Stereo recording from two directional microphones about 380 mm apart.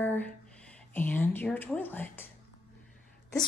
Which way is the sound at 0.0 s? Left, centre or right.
Centre.